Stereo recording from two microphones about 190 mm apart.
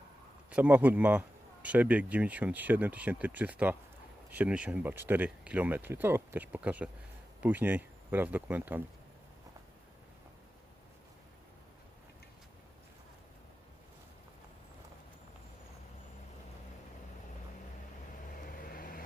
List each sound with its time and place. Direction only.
0.5 s speech: 10° right (ahead or behind)
18.4 s vehicle: 50° left (ahead or behind)